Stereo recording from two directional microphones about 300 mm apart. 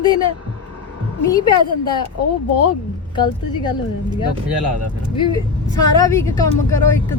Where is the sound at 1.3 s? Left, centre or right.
Centre.